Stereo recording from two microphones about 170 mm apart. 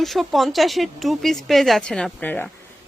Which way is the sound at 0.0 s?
Centre (ahead or behind).